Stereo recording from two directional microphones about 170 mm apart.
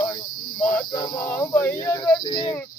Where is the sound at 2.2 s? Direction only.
25° left (ahead or behind).